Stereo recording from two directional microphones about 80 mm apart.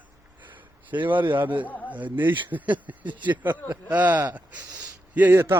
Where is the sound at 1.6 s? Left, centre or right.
Left.